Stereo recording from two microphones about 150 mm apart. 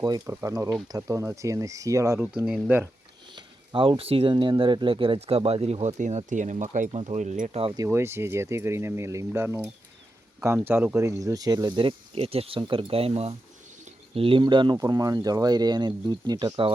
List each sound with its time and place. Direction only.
0.0 s speech: 25° right (ahead or behind)
2.4 s speech: 5° right (ahead or behind)
3.3 s speech: 35° right (ahead or behind)
7.9 s speech: 15° right (ahead or behind)